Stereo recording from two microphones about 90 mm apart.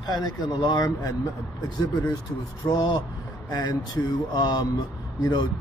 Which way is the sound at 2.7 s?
50° left (ahead or behind).